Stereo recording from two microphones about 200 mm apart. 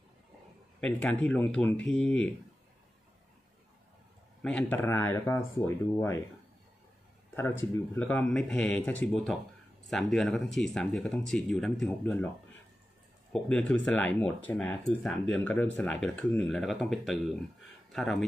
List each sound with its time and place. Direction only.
0.7 s speech: 5° left (ahead or behind)
4.4 s speech: 5° left (ahead or behind)
7.3 s speech: 10° left (ahead or behind)
13.3 s speech: 5° left (ahead or behind)